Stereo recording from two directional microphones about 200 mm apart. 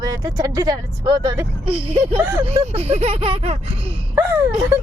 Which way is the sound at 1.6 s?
30° right (ahead or behind).